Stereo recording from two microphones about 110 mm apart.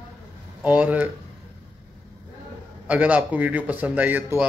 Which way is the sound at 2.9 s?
15° right (ahead or behind).